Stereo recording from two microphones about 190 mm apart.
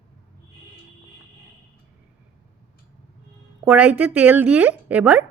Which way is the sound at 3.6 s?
10° right (ahead or behind).